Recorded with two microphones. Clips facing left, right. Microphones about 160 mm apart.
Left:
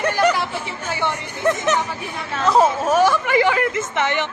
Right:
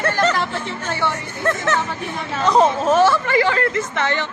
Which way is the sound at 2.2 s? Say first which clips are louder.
Right 1 dB; centre (ahead or behind).